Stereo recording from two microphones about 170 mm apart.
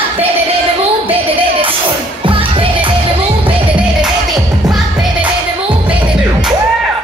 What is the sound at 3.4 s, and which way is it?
Music, 5° right (ahead or behind).